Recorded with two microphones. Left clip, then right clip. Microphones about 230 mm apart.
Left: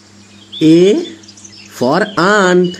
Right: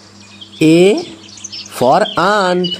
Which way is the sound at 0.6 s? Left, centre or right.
Right.